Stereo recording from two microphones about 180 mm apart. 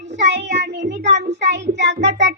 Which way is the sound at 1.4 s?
75° right (ahead or behind).